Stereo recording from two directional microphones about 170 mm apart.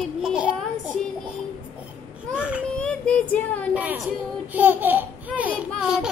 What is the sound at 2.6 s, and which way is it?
Child singing, 5° left (ahead or behind).